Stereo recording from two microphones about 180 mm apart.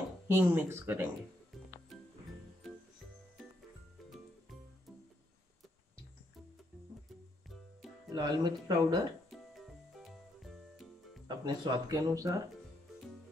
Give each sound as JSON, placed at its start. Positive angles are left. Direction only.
{"t": 0.3, "sound": "speech", "side_deg": -15}
{"t": 8.1, "sound": "speech", "side_deg": -25}
{"t": 10.0, "sound": "music", "side_deg": 0}
{"t": 11.2, "sound": "speech", "side_deg": -25}